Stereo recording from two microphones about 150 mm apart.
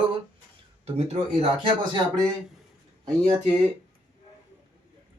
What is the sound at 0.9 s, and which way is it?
Speech, 45° right (ahead or behind).